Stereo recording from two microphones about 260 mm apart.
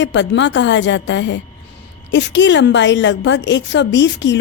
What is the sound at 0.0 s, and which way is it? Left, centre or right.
A woman's voice, left.